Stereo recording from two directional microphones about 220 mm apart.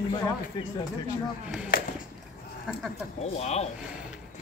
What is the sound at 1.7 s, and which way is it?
Speech, 40° left (ahead or behind).